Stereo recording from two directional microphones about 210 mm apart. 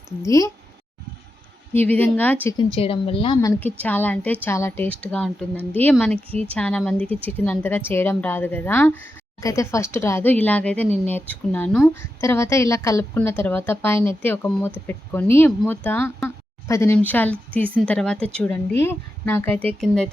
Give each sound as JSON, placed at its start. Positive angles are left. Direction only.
{"t": 0.2, "sound": "a woman's voice", "side_deg": 15}
{"t": 1.7, "sound": "a woman's voice", "side_deg": 10}
{"t": 2.7, "sound": "a woman's voice", "side_deg": 25}
{"t": 3.6, "sound": "a woman's voice", "side_deg": 10}
{"t": 6.1, "sound": "speech", "side_deg": -25}
{"t": 6.5, "sound": "a woman's voice", "side_deg": 5}